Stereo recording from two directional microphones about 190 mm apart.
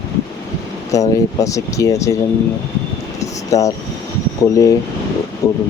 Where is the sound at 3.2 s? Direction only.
15° left (ahead or behind).